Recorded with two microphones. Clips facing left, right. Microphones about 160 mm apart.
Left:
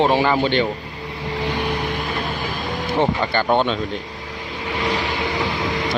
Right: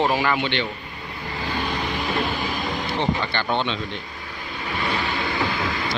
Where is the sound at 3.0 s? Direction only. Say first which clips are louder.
Left 6 dB; 45° left (ahead or behind).